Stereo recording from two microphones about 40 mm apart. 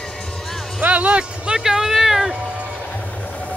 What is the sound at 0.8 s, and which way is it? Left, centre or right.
Speech, right.